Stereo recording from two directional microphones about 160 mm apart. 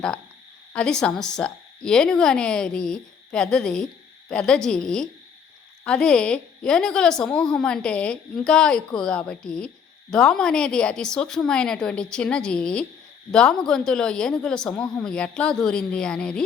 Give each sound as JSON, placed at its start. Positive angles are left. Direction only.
{"t": 0.7, "sound": "speech", "side_deg": 5}